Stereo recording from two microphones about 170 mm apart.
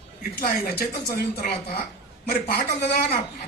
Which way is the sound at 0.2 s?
60° left (ahead or behind).